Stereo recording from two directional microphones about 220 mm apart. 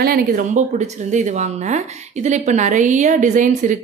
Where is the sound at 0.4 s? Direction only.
35° right (ahead or behind).